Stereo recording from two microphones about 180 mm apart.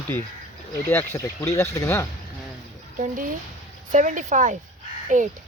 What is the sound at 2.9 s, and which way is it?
Speech, 45° right (ahead or behind).